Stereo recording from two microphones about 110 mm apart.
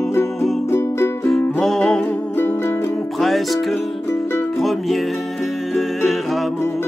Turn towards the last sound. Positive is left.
turn(degrees=0)  # may be behind; listen again after turning